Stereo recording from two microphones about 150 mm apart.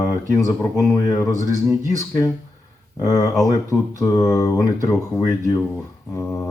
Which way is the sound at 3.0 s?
20° left (ahead or behind).